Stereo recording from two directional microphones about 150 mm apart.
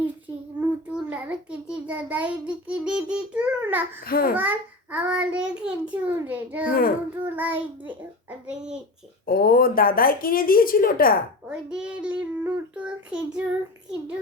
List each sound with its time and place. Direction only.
0.9 s a child's voice: 10° right (ahead or behind)
4.0 s speech: 75° left (ahead or behind)
4.4 s a child's voice: 10° right (ahead or behind)
6.7 s speech: 75° left (ahead or behind)
7.2 s a child's voice: 10° right (ahead or behind)
9.2 s speech: 75° left (ahead or behind)
11.4 s a child's voice: 5° right (ahead or behind)